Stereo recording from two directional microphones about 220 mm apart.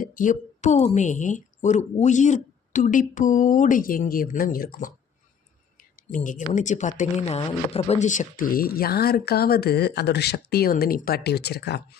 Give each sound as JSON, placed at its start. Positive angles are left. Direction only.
{"t": 0.0, "sound": "speech", "side_deg": 40}
{"t": 5.7, "sound": "a sound", "side_deg": 40}
{"t": 6.2, "sound": "speech", "side_deg": 35}